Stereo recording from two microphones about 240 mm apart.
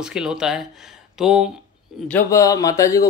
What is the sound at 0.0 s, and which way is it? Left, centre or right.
Speech, centre.